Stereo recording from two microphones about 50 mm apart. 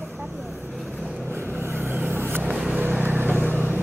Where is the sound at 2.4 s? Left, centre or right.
Centre.